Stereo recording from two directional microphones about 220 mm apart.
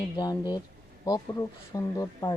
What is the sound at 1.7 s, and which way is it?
Speech, 15° left (ahead or behind).